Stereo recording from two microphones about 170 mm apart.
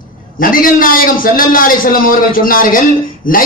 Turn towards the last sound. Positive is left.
turn(degrees=55)  # may be behind; listen again after turning